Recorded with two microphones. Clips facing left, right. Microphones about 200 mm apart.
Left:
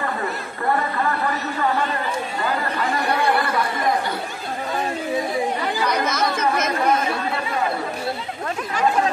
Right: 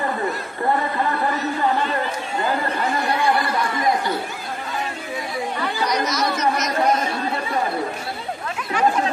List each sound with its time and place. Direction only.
6.0 s chatter: 55° left (ahead or behind)